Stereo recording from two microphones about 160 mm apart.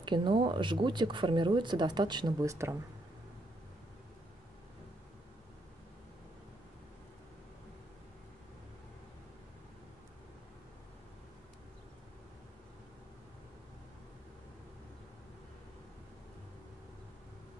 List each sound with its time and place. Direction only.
0.0 s speech: 30° right (ahead or behind)